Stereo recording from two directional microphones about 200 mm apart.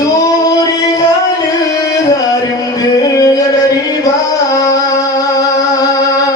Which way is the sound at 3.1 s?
15° left (ahead or behind).